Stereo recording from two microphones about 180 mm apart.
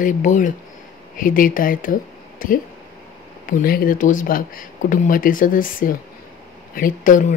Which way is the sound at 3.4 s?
55° left (ahead or behind).